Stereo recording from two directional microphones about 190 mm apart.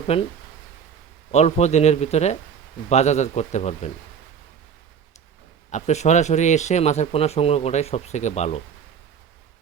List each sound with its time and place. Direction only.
0.1 s speech: 30° left (ahead or behind)
1.3 s speech: 35° left (ahead or behind)
5.7 s speech: 35° left (ahead or behind)